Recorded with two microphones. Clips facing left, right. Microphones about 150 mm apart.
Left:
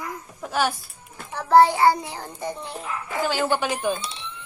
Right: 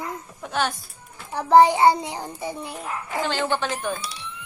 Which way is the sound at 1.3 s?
15° right (ahead or behind).